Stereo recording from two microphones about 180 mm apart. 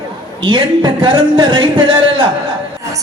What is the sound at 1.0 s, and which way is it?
Speech, 25° right (ahead or behind).